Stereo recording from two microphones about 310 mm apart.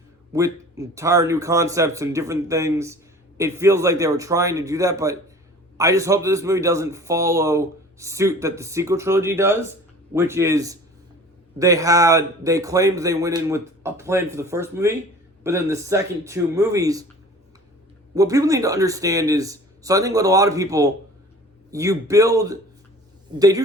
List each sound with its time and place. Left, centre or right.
0.3 s speech: centre
18.1 s speech: centre